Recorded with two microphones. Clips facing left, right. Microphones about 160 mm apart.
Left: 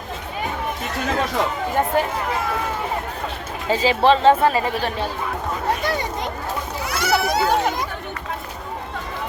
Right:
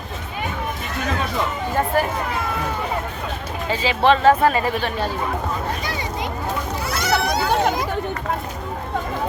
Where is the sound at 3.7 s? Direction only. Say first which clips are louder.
Left 1 dB; 40° left (ahead or behind).